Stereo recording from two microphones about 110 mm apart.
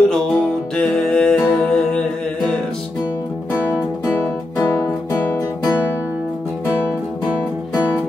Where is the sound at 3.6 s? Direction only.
15° left (ahead or behind).